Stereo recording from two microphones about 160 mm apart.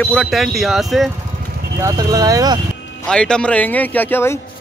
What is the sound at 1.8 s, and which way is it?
Speech, 20° right (ahead or behind).